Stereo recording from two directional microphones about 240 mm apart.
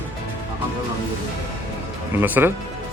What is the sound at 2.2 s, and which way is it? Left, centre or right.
Speech, centre.